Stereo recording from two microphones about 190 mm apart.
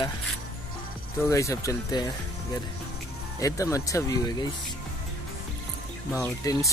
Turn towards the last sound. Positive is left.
turn(degrees=15)  # may be behind; listen again after turning